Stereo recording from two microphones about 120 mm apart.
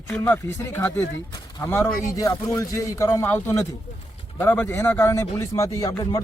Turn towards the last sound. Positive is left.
turn(degrees=30)  # may be behind; listen again after turning